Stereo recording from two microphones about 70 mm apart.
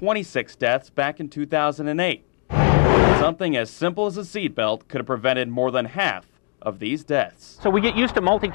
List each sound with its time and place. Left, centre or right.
0.0 s speech: right